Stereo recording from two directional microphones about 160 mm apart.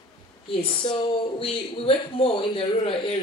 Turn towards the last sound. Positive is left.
turn(degrees=35)  # may be behind; listen again after turning